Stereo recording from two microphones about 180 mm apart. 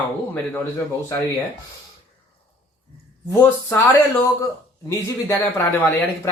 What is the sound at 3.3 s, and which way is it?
Speech, 15° left (ahead or behind).